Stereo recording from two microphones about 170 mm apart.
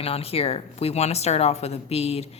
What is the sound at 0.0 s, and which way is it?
Speech, 35° left (ahead or behind).